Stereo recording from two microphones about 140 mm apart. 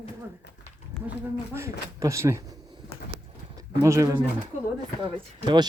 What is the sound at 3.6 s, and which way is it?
Speech, 20° right (ahead or behind).